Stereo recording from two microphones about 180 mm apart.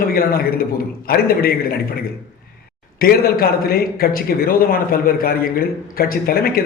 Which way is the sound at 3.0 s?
55° left (ahead or behind).